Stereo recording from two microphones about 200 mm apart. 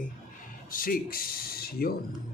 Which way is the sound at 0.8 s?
45° left (ahead or behind).